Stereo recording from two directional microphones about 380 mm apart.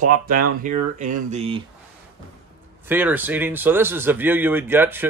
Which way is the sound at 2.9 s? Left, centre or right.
Centre.